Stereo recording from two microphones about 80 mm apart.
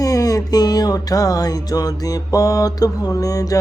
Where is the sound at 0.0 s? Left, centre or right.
Left.